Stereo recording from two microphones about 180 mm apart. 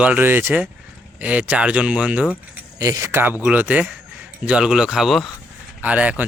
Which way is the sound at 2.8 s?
15° right (ahead or behind).